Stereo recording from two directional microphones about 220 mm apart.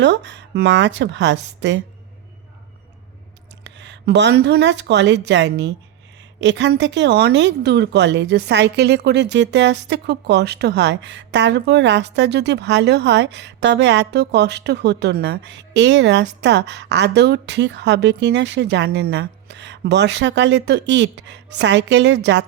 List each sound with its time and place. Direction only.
0.0 s speech: 55° right (ahead or behind)
3.6 s speech: 55° right (ahead or behind)